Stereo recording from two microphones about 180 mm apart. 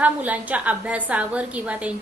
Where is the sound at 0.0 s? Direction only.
10° right (ahead or behind).